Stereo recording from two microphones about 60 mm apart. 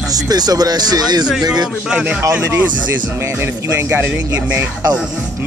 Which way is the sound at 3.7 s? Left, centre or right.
Right.